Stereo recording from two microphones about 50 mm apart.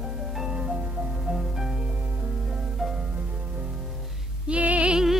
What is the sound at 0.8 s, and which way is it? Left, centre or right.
Music, right.